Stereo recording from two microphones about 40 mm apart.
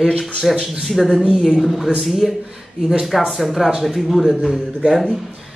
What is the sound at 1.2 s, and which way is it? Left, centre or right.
Speech, centre.